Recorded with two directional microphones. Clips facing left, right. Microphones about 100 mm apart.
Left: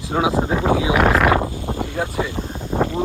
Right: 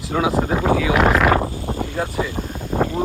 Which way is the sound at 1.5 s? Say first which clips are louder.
Even; 20° left (ahead or behind).